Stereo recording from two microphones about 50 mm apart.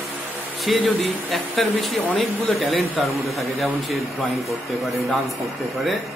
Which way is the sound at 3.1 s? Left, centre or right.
Right.